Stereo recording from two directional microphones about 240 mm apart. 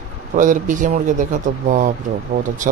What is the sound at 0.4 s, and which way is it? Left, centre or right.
Speech, right.